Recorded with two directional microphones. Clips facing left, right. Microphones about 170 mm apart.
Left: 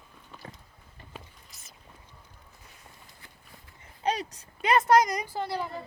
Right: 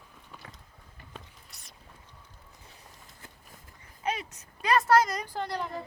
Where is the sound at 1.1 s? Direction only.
5° left (ahead or behind).